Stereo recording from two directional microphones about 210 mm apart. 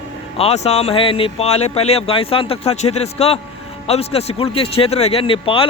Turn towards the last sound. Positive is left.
turn(degrees=25)  # may be behind; listen again after turning